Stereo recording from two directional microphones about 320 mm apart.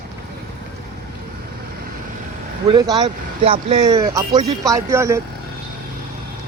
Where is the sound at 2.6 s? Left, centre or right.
Centre.